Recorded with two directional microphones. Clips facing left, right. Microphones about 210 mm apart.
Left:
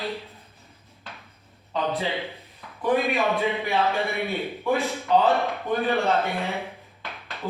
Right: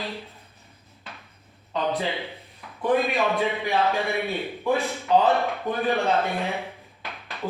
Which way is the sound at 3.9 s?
15° right (ahead or behind).